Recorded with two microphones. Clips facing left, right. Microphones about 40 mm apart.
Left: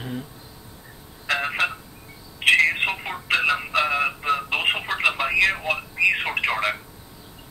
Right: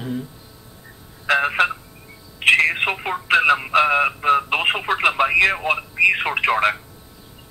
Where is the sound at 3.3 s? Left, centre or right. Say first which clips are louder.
Right 5 dB; right.